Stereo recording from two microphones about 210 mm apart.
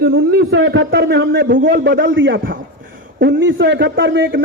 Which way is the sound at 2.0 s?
60° right (ahead or behind).